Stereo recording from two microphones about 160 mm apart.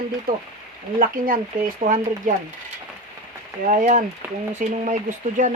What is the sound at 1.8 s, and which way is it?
Speech, 45° right (ahead or behind).